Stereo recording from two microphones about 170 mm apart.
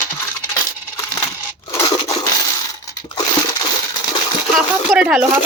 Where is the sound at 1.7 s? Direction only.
20° left (ahead or behind).